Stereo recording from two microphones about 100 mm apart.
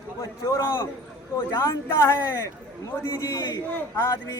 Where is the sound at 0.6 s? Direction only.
25° left (ahead or behind).